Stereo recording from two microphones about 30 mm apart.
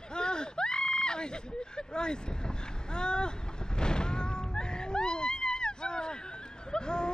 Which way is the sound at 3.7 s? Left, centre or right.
Left.